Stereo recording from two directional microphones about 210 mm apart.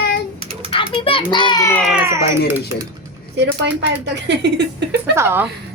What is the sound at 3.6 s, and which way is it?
Speech, 55° right (ahead or behind).